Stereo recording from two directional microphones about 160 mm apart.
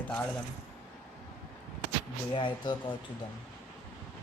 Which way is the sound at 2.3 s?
30° left (ahead or behind).